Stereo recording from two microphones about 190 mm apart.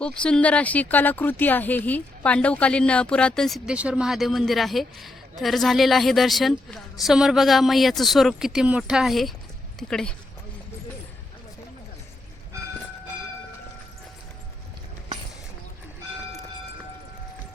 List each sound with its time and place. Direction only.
0.0 s speech: 5° left (ahead or behind)